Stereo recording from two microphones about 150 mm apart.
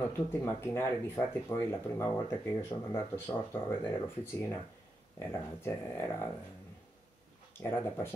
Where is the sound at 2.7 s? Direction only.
35° left (ahead or behind).